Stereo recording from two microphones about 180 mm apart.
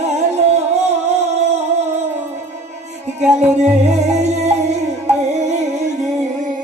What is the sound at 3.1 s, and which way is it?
Music, 40° right (ahead or behind).